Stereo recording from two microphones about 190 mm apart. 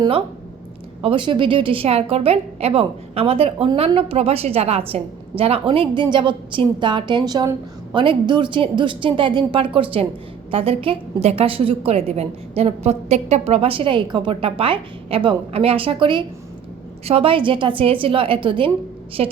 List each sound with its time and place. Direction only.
1.0 s a woman's voice: 25° right (ahead or behind)